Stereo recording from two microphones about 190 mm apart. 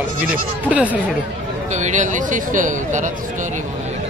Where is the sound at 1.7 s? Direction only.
40° right (ahead or behind).